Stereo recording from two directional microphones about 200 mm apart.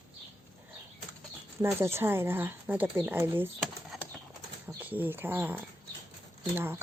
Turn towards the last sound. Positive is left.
turn(degrees=-10)  # may be behind; listen again after turning